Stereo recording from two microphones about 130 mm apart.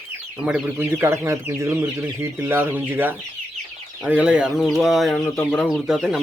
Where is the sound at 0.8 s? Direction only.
20° right (ahead or behind); by 5.2 s centre (ahead or behind).